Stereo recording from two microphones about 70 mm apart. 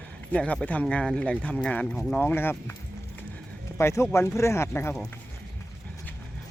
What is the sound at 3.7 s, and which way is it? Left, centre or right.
Speech, left.